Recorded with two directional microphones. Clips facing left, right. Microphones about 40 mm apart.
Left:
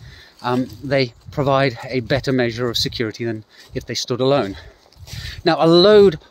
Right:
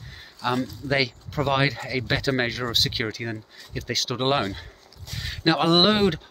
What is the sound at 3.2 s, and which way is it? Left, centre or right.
Speech, centre.